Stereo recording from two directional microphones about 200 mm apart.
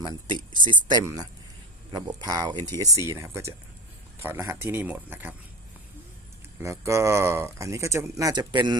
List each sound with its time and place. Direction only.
0.0 s speech: 20° right (ahead or behind)
6.6 s speech: 15° right (ahead or behind)